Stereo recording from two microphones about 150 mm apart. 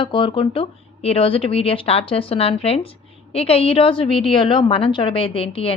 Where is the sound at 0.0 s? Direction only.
35° left (ahead or behind).